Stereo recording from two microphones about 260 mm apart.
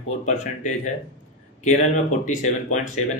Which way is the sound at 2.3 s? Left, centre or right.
Left.